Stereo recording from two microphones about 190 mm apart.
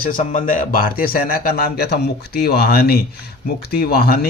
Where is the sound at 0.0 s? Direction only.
45° left (ahead or behind).